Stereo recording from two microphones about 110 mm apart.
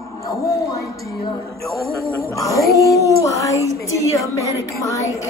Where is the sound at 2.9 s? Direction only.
30° left (ahead or behind).